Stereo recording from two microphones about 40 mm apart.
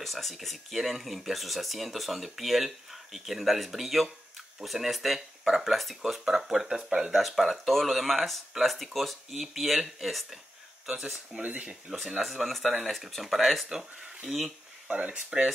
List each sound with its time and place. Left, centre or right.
0.0 s speech: centre
11.4 s speech: right
12.2 s speech: centre
13.7 s speech: centre
14.9 s speech: right